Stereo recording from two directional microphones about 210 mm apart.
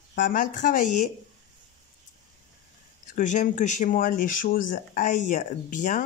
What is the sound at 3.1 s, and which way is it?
Speech, 35° left (ahead or behind).